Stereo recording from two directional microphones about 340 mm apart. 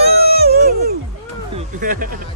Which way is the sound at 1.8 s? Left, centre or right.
Right.